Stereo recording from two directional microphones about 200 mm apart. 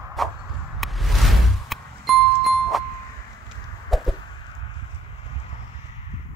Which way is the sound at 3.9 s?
Centre (ahead or behind).